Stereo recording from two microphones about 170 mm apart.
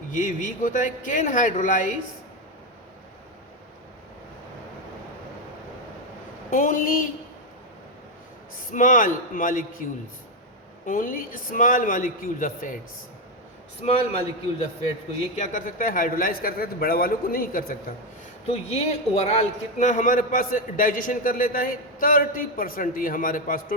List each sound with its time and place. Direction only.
0.1 s a man's voice: 50° left (ahead or behind)
6.5 s a man's voice: 50° left (ahead or behind)
8.7 s a man's voice: 50° left (ahead or behind)
10.8 s a man's voice: 50° left (ahead or behind)
13.8 s a man's voice: 35° left (ahead or behind)
15.4 s a man's voice: 50° left (ahead or behind)
18.4 s a man's voice: 40° left (ahead or behind); by 23.7 s 55° left (ahead or behind)